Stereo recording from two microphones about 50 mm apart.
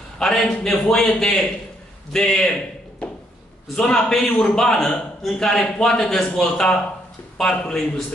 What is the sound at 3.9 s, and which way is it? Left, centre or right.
A man's voice, centre.